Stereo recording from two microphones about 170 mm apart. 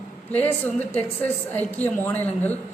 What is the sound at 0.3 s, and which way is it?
A woman's voice, 10° left (ahead or behind).